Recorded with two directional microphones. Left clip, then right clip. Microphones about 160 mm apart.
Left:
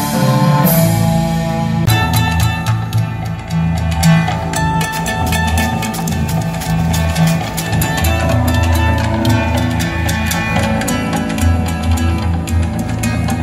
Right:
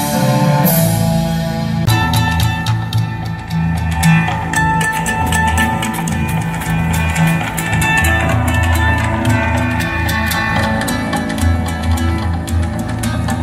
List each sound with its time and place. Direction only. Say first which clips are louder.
0.1 s music: left 1 dB; 35° right (ahead or behind)
4.0 s music: right 1 dB; 10° left (ahead or behind)
10.3 s music: left 1 dB; 25° left (ahead or behind)